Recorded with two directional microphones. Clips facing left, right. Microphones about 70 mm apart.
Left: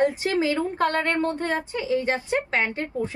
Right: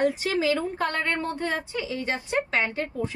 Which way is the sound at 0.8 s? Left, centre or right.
Left.